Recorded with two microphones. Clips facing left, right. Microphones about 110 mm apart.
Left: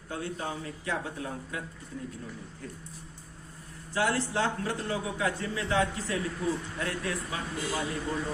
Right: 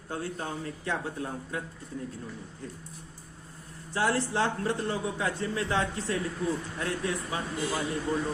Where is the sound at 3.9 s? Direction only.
30° right (ahead or behind).